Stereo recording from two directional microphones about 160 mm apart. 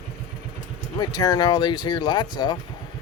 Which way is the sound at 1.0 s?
25° left (ahead or behind).